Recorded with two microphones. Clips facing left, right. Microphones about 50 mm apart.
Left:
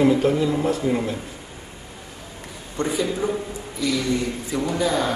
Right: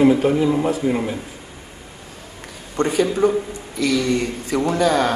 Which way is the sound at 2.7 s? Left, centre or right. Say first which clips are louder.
Right 5 dB; right.